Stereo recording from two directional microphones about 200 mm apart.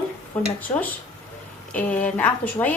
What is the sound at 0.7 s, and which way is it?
A woman's voice, 15° left (ahead or behind).